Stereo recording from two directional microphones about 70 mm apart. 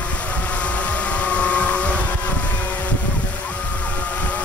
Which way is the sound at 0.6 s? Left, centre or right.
Centre.